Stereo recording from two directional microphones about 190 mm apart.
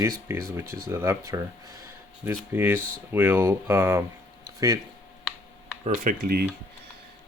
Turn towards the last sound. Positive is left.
turn(degrees=-50)  # may be behind; listen again after turning